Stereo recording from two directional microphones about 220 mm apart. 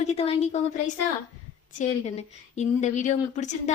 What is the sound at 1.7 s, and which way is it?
Speech, 30° left (ahead or behind).